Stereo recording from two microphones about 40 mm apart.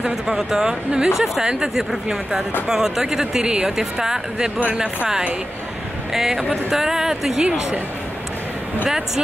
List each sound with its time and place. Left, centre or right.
0.3 s speech: centre
6.1 s speech: centre
8.8 s speech: centre